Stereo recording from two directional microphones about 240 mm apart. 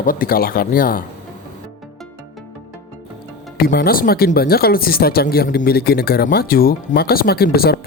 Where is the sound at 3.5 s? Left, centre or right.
Left.